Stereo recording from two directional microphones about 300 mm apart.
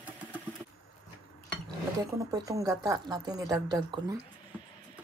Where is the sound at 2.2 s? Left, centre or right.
Centre.